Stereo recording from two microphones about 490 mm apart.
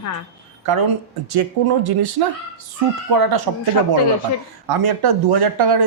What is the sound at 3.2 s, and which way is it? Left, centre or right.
Speech, right.